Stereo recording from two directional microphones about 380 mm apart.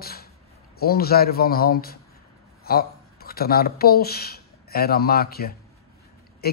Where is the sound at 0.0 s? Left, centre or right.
Left.